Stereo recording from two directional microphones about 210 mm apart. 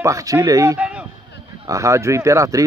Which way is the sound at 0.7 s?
5° right (ahead or behind).